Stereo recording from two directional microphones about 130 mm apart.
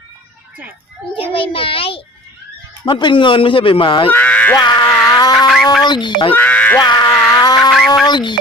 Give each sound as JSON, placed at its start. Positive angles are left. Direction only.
{"t": 1.1, "sound": "a child's voice", "side_deg": 45}
{"t": 4.1, "sound": "a sound", "side_deg": 10}
{"t": 4.5, "sound": "speech", "side_deg": 35}
{"t": 5.3, "sound": "a sound", "side_deg": 0}
{"t": 5.8, "sound": "speech", "side_deg": 35}
{"t": 6.3, "sound": "music", "side_deg": 10}
{"t": 6.7, "sound": "speech", "side_deg": 35}
{"t": 7.1, "sound": "a sound", "side_deg": 5}
{"t": 8.0, "sound": "speech", "side_deg": 35}